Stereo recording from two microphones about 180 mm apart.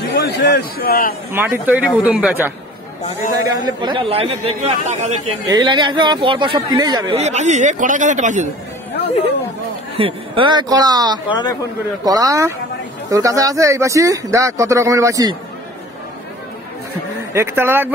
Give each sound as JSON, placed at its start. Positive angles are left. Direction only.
{"t": 0.1, "sound": "a man's voice", "side_deg": 65}
{"t": 1.3, "sound": "speech", "side_deg": -10}
{"t": 3.4, "sound": "speech", "side_deg": -20}
{"t": 5.5, "sound": "speech", "side_deg": -25}
{"t": 7.2, "sound": "speech", "side_deg": -40}
{"t": 9.9, "sound": "speech", "side_deg": -30}
{"t": 11.2, "sound": "speech", "side_deg": 25}
{"t": 12.0, "sound": "speech", "side_deg": -20}
{"t": 17.3, "sound": "speech", "side_deg": -15}